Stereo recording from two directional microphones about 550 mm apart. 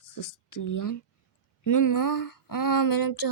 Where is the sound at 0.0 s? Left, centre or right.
Left.